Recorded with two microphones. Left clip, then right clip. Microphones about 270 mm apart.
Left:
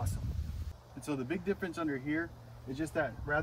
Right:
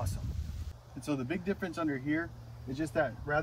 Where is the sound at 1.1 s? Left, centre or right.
Centre.